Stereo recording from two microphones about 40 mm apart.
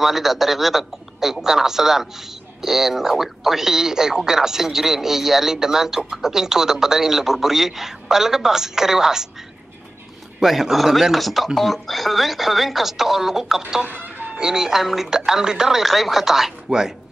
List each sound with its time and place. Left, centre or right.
0.0 s speech: centre
10.4 s speech: centre
13.8 s music: right
14.3 s speech: centre
14.8 s speech: centre